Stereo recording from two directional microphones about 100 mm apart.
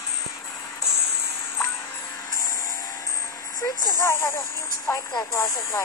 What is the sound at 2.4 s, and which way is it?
Vehicle, 35° left (ahead or behind).